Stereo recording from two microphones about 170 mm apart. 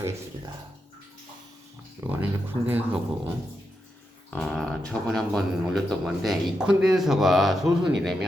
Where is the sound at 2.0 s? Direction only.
15° right (ahead or behind).